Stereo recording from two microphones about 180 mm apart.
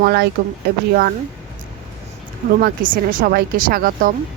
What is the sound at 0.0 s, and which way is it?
Speech, 65° right (ahead or behind).